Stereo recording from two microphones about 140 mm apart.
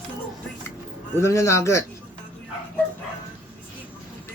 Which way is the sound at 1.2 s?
20° left (ahead or behind).